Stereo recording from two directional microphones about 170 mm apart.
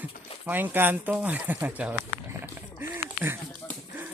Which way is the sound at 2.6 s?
15° right (ahead or behind).